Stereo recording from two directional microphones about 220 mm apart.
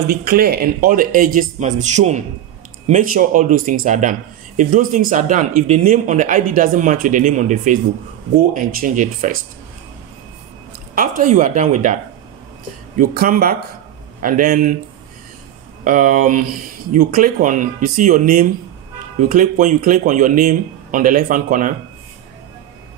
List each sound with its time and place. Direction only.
0.1 s speech: 40° right (ahead or behind)
11.0 s speech: 35° right (ahead or behind)
15.8 s speech: 35° right (ahead or behind)